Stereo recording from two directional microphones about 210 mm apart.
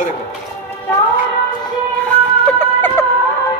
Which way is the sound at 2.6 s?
10° left (ahead or behind).